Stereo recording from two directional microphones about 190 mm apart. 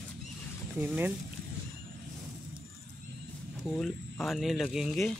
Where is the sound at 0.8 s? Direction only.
10° right (ahead or behind).